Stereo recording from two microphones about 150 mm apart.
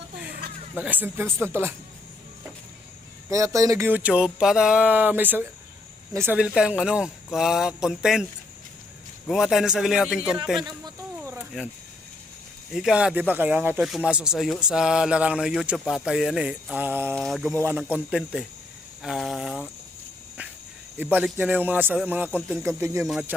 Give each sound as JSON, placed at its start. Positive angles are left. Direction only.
{"t": 0.8, "sound": "speech", "side_deg": -10}
{"t": 3.2, "sound": "speech", "side_deg": -20}
{"t": 6.4, "sound": "speech", "side_deg": -5}
{"t": 10.6, "sound": "speech", "side_deg": -25}
{"t": 12.7, "sound": "speech", "side_deg": -5}
{"t": 17.2, "sound": "speech", "side_deg": 0}
{"t": 17.5, "sound": "speech", "side_deg": -15}
{"t": 21.0, "sound": "speech", "side_deg": -10}
{"t": 22.3, "sound": "speech", "side_deg": 5}
{"t": 22.6, "sound": "speech", "side_deg": -20}